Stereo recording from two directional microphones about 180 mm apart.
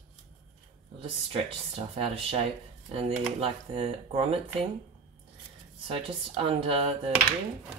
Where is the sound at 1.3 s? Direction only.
30° right (ahead or behind).